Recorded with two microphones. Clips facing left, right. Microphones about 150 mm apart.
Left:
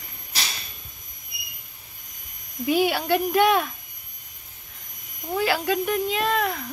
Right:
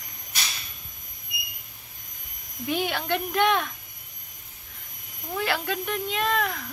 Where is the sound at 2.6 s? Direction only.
5° left (ahead or behind).